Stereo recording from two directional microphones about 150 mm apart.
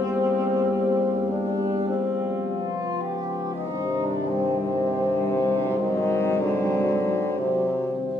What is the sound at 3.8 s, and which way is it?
Music, 25° right (ahead or behind).